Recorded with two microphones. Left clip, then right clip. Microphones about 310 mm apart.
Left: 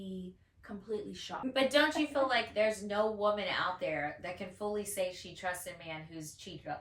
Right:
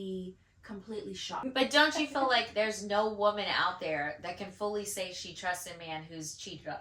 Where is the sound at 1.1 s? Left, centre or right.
Centre.